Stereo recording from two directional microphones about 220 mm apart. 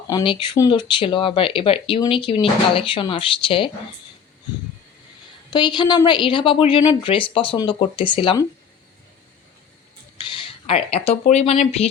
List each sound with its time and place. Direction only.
0.1 s speech: 20° left (ahead or behind)
5.5 s speech: 20° left (ahead or behind)
10.7 s speech: 25° left (ahead or behind)